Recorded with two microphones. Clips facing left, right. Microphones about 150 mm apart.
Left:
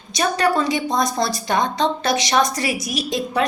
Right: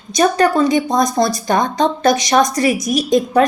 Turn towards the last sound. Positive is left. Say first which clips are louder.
# right 8 dB
turn(degrees=-45)  # may be behind; listen again after turning